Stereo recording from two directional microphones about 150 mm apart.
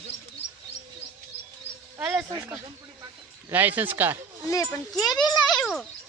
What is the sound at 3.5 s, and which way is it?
Speech, 10° right (ahead or behind).